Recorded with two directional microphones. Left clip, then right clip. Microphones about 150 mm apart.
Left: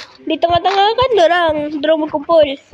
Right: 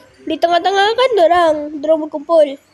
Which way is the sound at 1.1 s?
Centre (ahead or behind).